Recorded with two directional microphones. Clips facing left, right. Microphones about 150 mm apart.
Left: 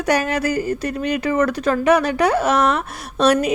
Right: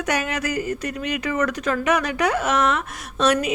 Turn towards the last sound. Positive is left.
turn(degrees=40)  # may be behind; listen again after turning